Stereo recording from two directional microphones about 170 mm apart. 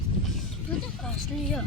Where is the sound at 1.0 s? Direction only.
5° left (ahead or behind).